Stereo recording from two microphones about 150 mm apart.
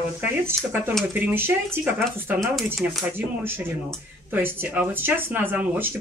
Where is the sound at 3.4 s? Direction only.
15° right (ahead or behind).